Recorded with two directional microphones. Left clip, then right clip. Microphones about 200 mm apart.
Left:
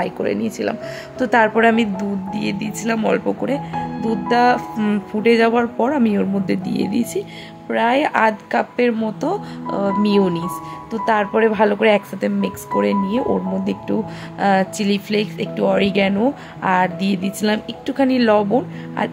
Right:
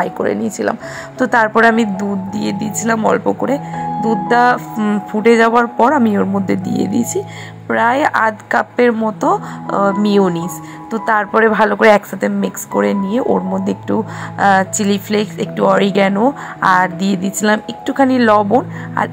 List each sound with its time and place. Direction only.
0.0 s speech: 5° right (ahead or behind)